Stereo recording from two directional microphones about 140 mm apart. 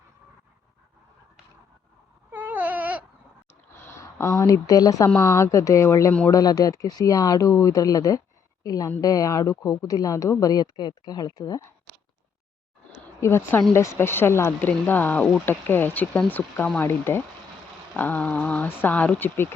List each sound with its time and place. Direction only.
2.3 s baby cry: 15° right (ahead or behind)
3.8 s speech: 20° left (ahead or behind)
13.1 s speech: 20° left (ahead or behind)